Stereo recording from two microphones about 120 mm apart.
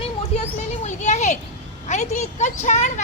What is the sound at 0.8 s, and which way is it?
A child's voice, 75° left (ahead or behind).